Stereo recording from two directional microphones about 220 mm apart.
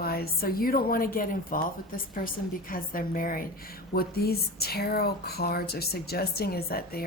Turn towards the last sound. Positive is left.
turn(degrees=45)  # may be behind; listen again after turning